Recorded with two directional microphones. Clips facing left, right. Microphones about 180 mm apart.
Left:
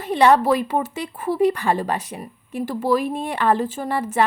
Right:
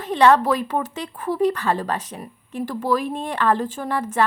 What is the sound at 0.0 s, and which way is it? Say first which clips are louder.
Speech: even; 10° left (ahead or behind).